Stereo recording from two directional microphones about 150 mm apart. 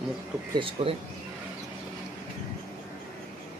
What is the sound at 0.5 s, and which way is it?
Speech, 35° right (ahead or behind).